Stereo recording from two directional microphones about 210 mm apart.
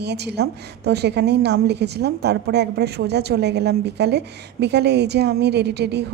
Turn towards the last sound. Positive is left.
turn(degrees=-50)  # may be behind; listen again after turning